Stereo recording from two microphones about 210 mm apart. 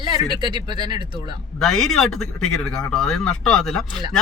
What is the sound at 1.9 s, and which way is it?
Speech, centre (ahead or behind).